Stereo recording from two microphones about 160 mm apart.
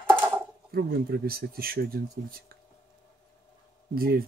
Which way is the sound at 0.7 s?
75° right (ahead or behind).